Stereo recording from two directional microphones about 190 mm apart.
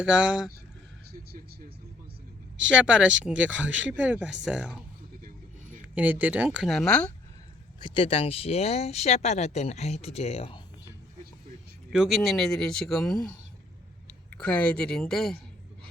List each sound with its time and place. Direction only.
0.0 s a man's voice: 5° right (ahead or behind)
2.6 s a man's voice: 5° right (ahead or behind)
5.9 s speech: 10° right (ahead or behind)
7.8 s speech: 25° left (ahead or behind)
11.9 s a man's voice: centre (ahead or behind)